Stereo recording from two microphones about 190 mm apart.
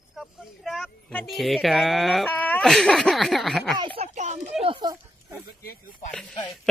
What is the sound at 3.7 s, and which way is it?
Speech, 25° right (ahead or behind).